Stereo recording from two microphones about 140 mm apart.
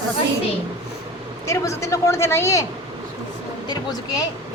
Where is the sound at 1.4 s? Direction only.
20° left (ahead or behind).